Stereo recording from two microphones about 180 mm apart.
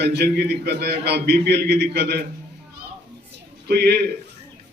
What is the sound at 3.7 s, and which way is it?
Speech, 65° right (ahead or behind).